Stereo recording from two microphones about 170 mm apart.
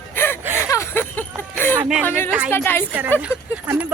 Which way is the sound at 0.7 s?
15° left (ahead or behind).